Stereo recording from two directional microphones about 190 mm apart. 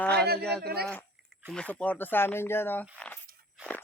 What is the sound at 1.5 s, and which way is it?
Speech, 5° left (ahead or behind).